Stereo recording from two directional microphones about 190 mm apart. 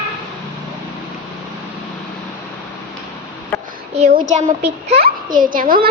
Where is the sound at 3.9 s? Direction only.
35° right (ahead or behind).